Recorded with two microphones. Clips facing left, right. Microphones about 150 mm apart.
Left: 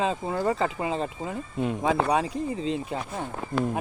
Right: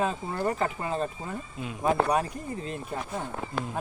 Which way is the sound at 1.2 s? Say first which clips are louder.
Left 7 dB; 75° left (ahead or behind).